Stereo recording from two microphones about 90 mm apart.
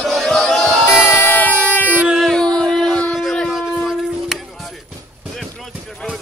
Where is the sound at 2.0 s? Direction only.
Centre (ahead or behind).